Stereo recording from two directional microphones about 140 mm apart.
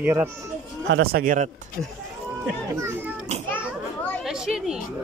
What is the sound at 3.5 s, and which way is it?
Children playing, 15° left (ahead or behind).